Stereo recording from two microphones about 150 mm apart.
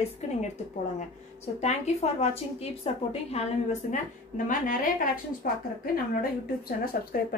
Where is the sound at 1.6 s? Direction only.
45° left (ahead or behind); by 4.9 s 60° left (ahead or behind).